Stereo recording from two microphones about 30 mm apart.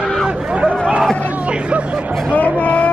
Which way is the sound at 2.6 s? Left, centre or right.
Left.